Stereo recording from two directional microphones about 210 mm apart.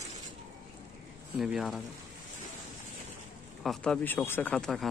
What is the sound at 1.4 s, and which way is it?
Speech, centre (ahead or behind).